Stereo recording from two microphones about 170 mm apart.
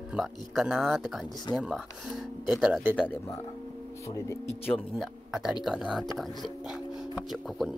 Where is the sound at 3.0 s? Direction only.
15° left (ahead or behind).